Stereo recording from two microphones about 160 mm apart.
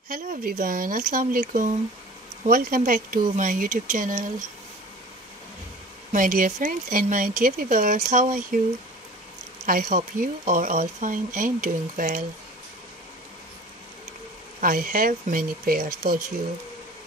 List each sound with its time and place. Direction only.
0.1 s speech: 60° right (ahead or behind)
6.1 s speech: 55° right (ahead or behind)
9.7 s speech: 55° right (ahead or behind)
14.6 s speech: 60° right (ahead or behind)